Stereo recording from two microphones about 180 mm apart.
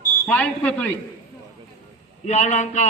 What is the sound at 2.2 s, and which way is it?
Speech, 40° left (ahead or behind).